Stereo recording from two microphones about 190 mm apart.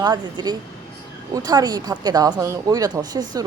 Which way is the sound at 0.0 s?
20° right (ahead or behind).